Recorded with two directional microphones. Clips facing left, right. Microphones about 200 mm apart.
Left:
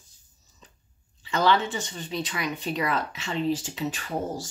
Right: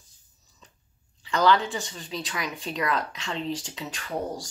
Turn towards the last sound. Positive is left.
turn(degrees=5)  # may be behind; listen again after turning